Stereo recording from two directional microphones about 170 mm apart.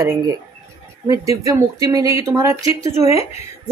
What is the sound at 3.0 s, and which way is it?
Speech, 35° left (ahead or behind).